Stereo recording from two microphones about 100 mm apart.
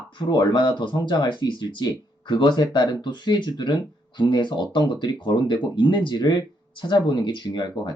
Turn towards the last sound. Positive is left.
turn(degrees=50)  # may be behind; listen again after turning